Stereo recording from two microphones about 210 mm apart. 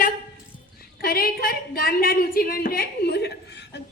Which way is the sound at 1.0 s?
45° left (ahead or behind).